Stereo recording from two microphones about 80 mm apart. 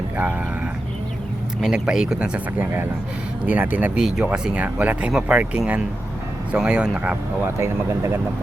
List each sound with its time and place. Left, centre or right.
1.6 s speech: centre
3.9 s speech: centre
7.4 s speech: right